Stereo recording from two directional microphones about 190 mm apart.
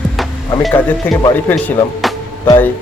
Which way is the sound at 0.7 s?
5° left (ahead or behind).